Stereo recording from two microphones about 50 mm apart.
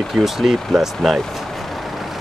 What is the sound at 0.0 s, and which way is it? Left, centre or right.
Speech, centre.